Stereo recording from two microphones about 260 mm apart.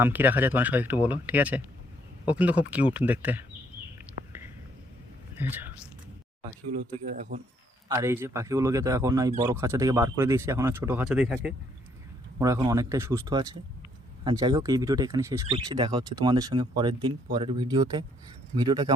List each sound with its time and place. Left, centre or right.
0.0 s speech: centre
4.3 s whispering: centre
5.4 s speech: centre
7.1 s speech: right
7.9 s speech: centre